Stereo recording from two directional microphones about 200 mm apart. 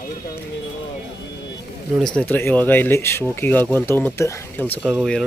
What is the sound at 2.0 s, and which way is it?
Speech, 5° left (ahead or behind).